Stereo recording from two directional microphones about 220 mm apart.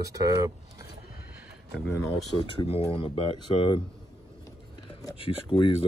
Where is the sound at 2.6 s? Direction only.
25° left (ahead or behind).